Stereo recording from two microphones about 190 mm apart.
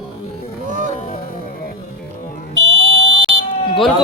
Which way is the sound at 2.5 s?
90° right.